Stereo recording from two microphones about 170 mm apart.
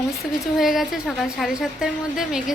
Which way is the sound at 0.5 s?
Centre (ahead or behind).